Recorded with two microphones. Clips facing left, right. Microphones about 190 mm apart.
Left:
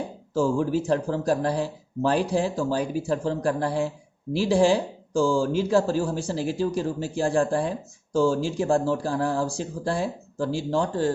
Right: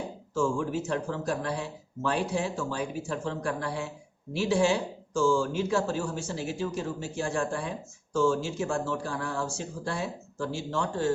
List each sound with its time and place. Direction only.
0.3 s speech: 35° left (ahead or behind)